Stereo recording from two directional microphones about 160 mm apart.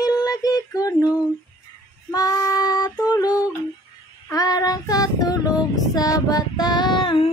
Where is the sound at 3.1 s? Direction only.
25° left (ahead or behind).